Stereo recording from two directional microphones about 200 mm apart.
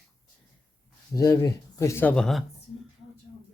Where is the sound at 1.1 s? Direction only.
15° left (ahead or behind).